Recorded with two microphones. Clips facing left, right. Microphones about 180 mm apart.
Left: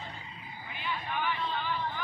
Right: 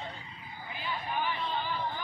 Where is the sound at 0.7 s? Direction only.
35° right (ahead or behind).